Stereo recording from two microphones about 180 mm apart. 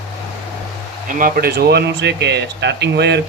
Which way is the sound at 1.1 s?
55° right (ahead or behind).